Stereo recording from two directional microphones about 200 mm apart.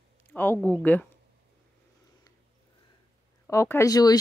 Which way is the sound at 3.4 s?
10° left (ahead or behind).